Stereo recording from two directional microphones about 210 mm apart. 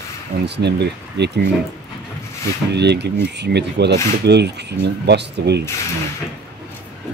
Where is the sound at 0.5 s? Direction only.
55° right (ahead or behind).